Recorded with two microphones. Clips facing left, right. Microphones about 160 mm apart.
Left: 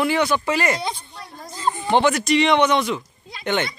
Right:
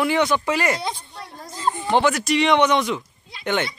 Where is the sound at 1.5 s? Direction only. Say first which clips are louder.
Even; centre (ahead or behind).